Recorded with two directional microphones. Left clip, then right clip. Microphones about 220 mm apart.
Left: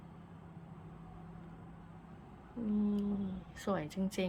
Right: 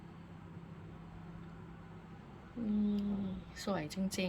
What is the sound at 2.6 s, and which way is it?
A woman's voice, 10° left (ahead or behind).